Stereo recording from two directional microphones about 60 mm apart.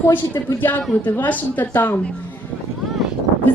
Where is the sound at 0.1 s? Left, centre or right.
Left.